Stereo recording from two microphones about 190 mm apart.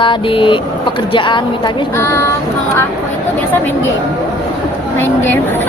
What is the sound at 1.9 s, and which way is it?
Speech, 10° left (ahead or behind).